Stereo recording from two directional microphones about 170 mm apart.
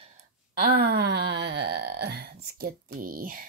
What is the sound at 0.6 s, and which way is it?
Wail, 70° right (ahead or behind).